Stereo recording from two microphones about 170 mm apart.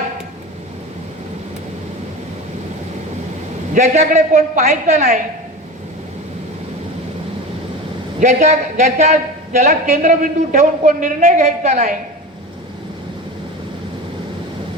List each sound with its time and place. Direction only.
3.8 s a man's voice: 45° right (ahead or behind)
8.2 s a man's voice: 45° right (ahead or behind)